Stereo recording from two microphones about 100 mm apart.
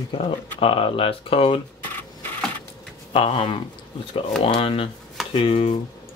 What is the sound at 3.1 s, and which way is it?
Speech, 65° left (ahead or behind).